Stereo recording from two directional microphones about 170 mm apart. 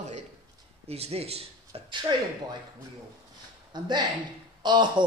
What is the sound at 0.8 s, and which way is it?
Speech, 35° right (ahead or behind).